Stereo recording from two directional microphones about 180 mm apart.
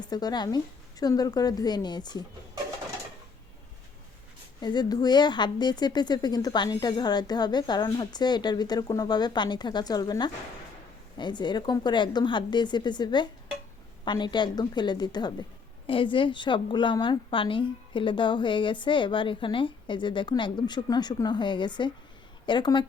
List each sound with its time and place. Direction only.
0.0 s a woman's voice: 20° left (ahead or behind)
4.6 s a woman's voice: 25° left (ahead or behind)